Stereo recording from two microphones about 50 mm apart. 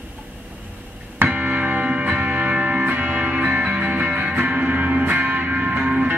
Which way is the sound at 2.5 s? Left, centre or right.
Right.